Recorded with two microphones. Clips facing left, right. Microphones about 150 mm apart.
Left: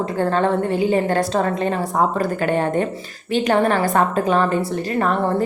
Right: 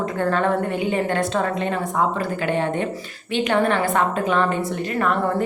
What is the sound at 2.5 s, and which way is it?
Speech, 45° left (ahead or behind).